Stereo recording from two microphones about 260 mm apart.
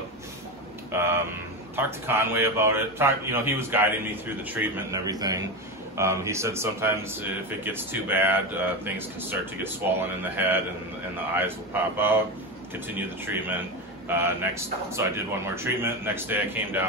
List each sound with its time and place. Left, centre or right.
0.9 s speech: centre